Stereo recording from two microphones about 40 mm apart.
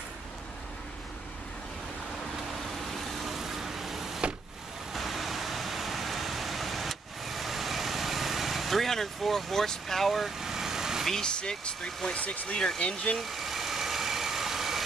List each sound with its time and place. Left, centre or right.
2.9 s vehicle: centre
11.2 s speech: left
12.2 s speech: left
13.2 s vehicle: centre